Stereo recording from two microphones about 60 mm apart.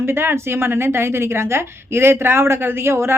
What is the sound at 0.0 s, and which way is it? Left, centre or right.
A woman's voice, right.